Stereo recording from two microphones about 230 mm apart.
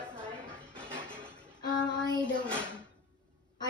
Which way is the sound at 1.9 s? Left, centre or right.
Centre.